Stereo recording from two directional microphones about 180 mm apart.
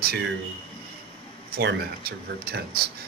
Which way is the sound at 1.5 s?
70° right (ahead or behind).